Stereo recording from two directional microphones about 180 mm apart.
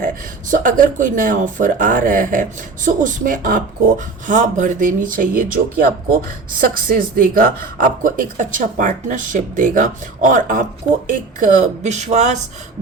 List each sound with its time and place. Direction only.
0.0 s speech: 45° right (ahead or behind)